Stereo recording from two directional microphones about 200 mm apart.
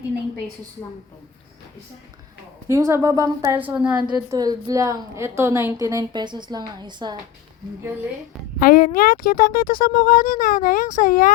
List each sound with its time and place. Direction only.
2.6 s a woman's voice: 15° right (ahead or behind)
3.9 s a woman's voice: 20° right (ahead or behind)
8.5 s speech: 45° left (ahead or behind)